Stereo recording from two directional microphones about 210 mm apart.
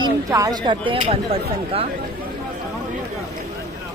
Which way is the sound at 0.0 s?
15° right (ahead or behind).